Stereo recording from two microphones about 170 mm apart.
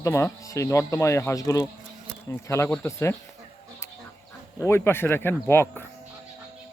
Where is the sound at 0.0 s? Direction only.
15° left (ahead or behind).